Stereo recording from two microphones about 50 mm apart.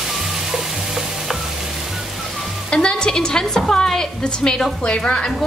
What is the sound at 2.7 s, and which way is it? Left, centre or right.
A woman's voice, centre.